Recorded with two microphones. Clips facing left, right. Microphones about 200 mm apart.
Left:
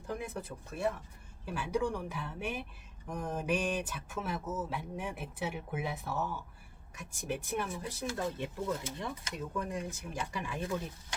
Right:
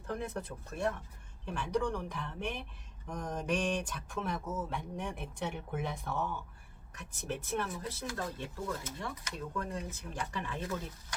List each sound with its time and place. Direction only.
0.1 s speech: 10° left (ahead or behind)